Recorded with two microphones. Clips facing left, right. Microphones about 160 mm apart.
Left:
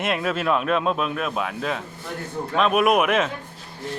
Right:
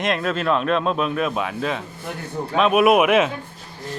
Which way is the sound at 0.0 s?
10° left (ahead or behind).